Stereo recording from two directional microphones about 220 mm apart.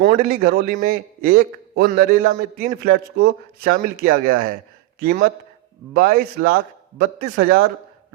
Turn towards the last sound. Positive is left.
turn(degrees=-45)  # may be behind; listen again after turning